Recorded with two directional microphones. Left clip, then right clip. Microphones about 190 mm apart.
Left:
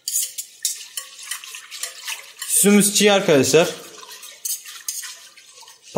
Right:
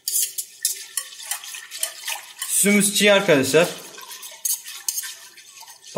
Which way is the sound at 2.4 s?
15° left (ahead or behind).